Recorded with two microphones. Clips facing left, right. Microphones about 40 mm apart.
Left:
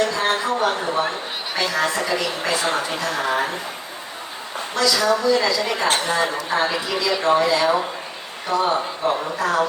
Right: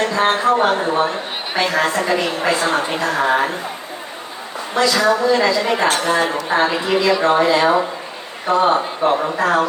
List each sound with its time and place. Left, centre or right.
0.0 s a woman's voice: right
4.8 s a woman's voice: right